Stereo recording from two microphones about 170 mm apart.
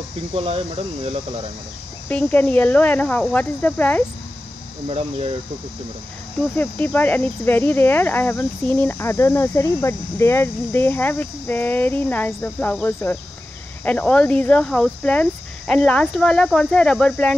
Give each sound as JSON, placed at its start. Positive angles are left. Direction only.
{"t": 0.3, "sound": "speech", "side_deg": -35}
{"t": 2.0, "sound": "speech", "side_deg": 10}
{"t": 4.8, "sound": "speech", "side_deg": -35}
{"t": 6.5, "sound": "speech", "side_deg": 10}